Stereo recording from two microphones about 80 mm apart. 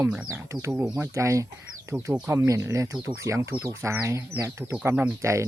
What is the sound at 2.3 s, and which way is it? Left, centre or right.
Speech, right.